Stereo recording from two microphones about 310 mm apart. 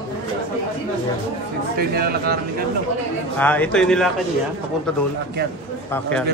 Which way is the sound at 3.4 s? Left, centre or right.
Centre.